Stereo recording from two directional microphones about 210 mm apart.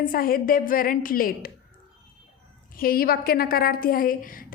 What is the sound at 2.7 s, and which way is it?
A woman's voice, 45° left (ahead or behind).